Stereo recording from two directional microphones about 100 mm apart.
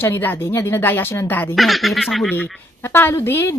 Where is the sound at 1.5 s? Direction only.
Centre (ahead or behind).